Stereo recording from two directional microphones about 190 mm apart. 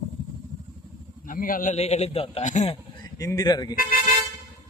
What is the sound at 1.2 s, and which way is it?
A man's voice, 45° left (ahead or behind).